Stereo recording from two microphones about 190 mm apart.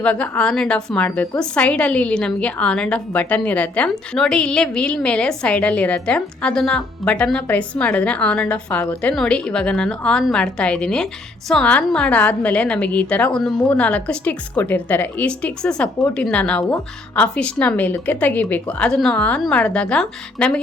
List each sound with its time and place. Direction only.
0.0 s a woman's voice: 5° left (ahead or behind)